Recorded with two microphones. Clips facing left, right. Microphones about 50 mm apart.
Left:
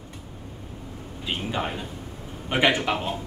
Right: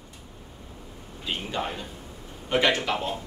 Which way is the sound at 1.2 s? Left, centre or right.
Centre.